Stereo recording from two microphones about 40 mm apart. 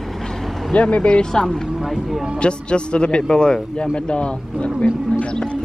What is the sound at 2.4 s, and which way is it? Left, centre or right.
Speech, left.